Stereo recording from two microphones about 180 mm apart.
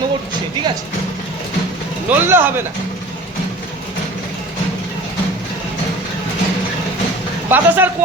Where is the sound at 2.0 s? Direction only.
10° right (ahead or behind).